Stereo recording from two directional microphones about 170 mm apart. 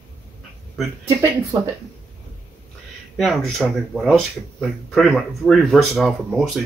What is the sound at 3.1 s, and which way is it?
Speech, centre (ahead or behind).